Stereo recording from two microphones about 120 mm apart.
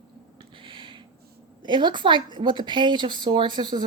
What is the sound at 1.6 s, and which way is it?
Speech, 40° right (ahead or behind).